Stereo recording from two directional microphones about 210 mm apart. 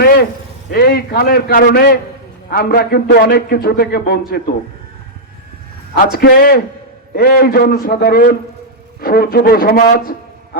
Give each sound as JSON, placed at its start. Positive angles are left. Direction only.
{"t": 0.0, "sound": "a sound", "side_deg": 45}
{"t": 0.7, "sound": "a man's voice", "side_deg": 45}
{"t": 6.0, "sound": "a man's voice", "side_deg": 45}